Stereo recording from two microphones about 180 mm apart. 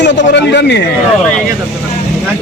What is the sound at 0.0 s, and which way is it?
Speech, 75° left (ahead or behind).